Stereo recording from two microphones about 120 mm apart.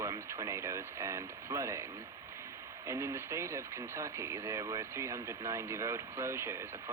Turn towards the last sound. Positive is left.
turn(degrees=-20)  # may be behind; listen again after turning